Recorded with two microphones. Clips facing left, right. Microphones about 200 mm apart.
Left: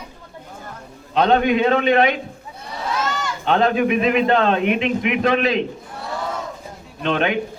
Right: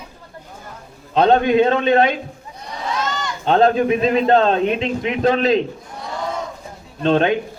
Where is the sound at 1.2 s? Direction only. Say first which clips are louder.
Right 3 dB; 35° right (ahead or behind).